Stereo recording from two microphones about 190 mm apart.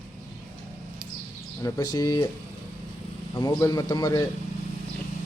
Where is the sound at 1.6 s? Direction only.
20° left (ahead or behind).